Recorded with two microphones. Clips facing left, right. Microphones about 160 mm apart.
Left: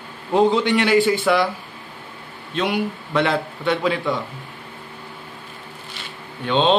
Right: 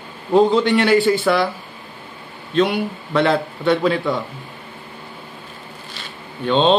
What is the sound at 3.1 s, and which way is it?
Speech, 10° left (ahead or behind).